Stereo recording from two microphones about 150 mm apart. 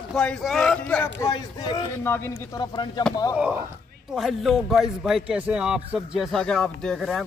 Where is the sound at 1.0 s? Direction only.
25° left (ahead or behind).